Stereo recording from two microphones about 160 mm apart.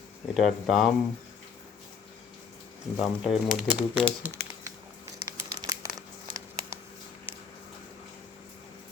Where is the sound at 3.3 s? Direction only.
5° right (ahead or behind).